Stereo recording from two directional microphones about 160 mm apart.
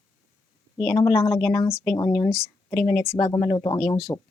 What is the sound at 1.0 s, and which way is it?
Speech, 15° left (ahead or behind).